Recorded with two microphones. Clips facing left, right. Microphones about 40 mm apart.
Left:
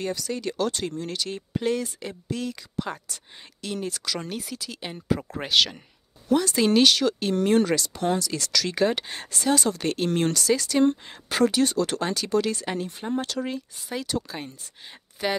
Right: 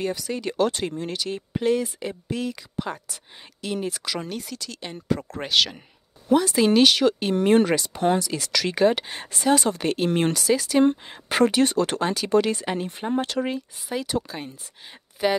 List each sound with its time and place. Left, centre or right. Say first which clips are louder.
0.0 s speech: right 2 dB; centre
1.1 s speech: right 1 dB; centre
4.2 s speech: right 1 dB; centre; by 8.8 s right
8.8 s speech: right 7 dB; centre
9.8 s speech: right 2 dB; centre
11.2 s speech: right 2 dB; right
12.0 s speech: right 3 dB; centre
12.3 s speech: right 4 dB; right
13.5 s speech: right 3 dB; centre